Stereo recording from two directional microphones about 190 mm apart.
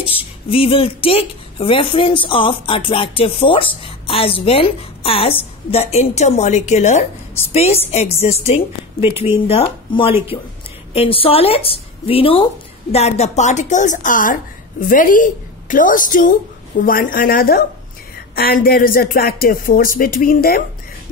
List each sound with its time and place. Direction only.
0.0 s a woman's voice: 30° left (ahead or behind); by 20.6 s 50° left (ahead or behind)